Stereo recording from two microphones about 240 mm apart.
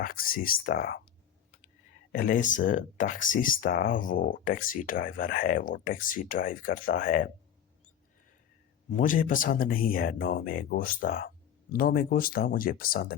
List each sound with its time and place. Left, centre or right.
0.0 s speech: left
2.1 s speech: left
8.9 s speech: left